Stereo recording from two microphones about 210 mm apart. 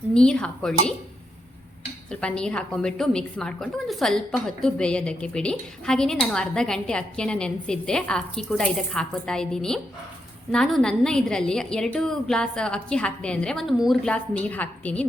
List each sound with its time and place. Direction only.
0.1 s a woman's voice: 5° left (ahead or behind)
2.0 s a woman's voice: 5° left (ahead or behind)